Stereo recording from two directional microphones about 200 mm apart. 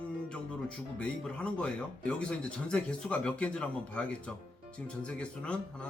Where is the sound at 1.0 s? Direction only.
5° left (ahead or behind).